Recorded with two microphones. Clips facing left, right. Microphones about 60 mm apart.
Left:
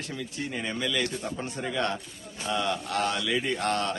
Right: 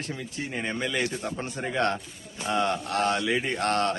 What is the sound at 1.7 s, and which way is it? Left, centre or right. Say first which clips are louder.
A man's voice: right 5 dB; right.